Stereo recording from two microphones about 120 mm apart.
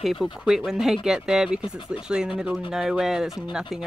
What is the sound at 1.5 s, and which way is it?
Speech, 45° left (ahead or behind).